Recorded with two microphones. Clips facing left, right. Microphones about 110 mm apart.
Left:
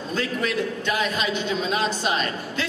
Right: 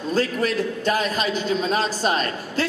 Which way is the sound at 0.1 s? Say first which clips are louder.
Right 4 dB; 40° right (ahead or behind).